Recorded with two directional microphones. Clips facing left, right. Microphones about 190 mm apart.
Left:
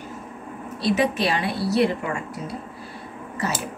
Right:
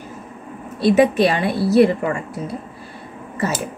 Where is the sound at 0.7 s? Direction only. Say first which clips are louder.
Right 8 dB; 50° right (ahead or behind).